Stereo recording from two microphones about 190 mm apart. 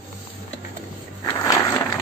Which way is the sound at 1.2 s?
20° left (ahead or behind).